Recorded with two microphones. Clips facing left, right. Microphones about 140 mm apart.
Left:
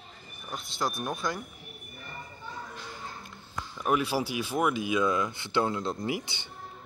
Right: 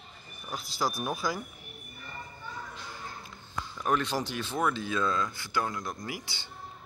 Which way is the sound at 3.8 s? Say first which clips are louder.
Left 2 dB; 5° left (ahead or behind).